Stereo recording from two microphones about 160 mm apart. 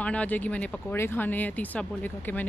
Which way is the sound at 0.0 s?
10° left (ahead or behind).